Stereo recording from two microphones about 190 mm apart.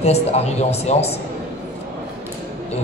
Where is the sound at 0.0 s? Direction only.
35° left (ahead or behind).